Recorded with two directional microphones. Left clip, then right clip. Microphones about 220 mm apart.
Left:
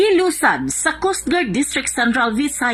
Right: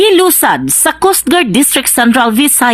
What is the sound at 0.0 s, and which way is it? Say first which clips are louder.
Speech: right 7 dB; 35° right (ahead or behind).